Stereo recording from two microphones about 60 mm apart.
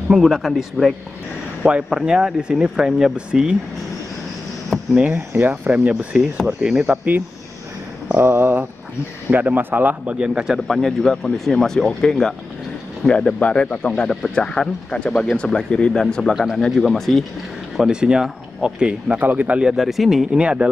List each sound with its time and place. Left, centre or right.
0.1 s speech: centre
1.6 s speech: centre
4.9 s speech: right
6.4 s speech: centre
8.2 s speech: right
10.1 s speech: centre
10.7 s speech: centre
17.7 s speech: centre
19.1 s speech: right
19.6 s speech: centre
20.3 s speech: centre